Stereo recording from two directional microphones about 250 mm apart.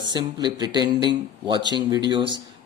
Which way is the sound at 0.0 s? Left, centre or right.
Centre.